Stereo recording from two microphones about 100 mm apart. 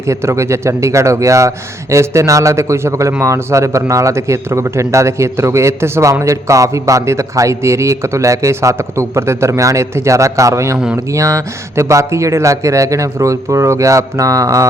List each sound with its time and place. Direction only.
0.0 s speech: 25° right (ahead or behind)